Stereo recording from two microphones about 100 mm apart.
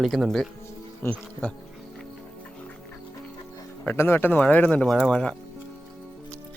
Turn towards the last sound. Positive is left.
turn(degrees=10)  # may be behind; listen again after turning